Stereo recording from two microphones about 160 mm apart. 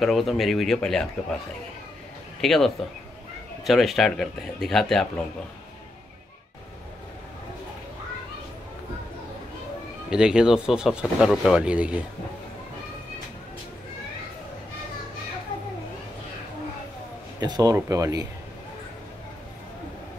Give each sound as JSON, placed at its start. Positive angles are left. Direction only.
{"t": 0.0, "sound": "speech", "side_deg": 0}
{"t": 2.4, "sound": "speech", "side_deg": 0}
{"t": 10.0, "sound": "speech", "side_deg": -5}
{"t": 17.4, "sound": "speech", "side_deg": -25}